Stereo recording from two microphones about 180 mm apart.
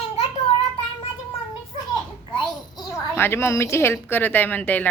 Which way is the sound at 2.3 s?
20° left (ahead or behind).